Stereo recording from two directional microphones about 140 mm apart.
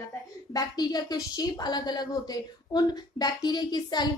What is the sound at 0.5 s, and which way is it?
A woman's voice, 30° left (ahead or behind).